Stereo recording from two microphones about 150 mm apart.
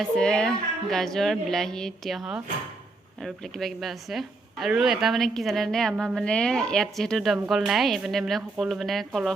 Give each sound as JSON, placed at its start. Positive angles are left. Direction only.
{"t": 0.0, "sound": "a woman's voice", "side_deg": 5}